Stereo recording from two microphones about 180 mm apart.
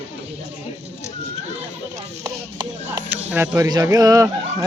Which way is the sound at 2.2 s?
20° right (ahead or behind).